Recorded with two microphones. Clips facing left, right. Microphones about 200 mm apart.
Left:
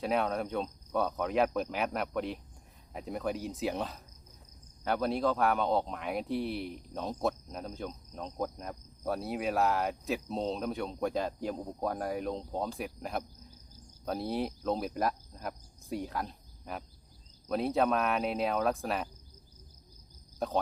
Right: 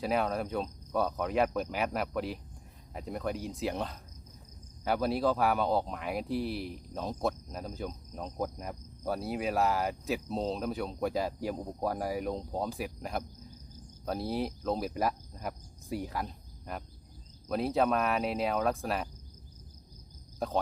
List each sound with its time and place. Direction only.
0.0 s speech: centre (ahead or behind)
20.4 s speech: centre (ahead or behind)